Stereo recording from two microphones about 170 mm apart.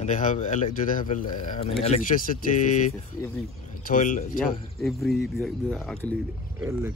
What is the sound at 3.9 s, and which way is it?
Speech, 50° left (ahead or behind).